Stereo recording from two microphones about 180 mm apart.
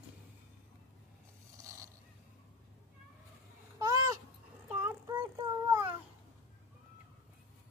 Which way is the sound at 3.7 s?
20° right (ahead or behind).